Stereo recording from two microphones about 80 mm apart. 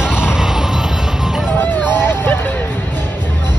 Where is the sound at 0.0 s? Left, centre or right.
Centre.